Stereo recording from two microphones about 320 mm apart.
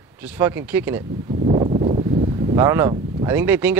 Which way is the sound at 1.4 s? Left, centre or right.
Centre.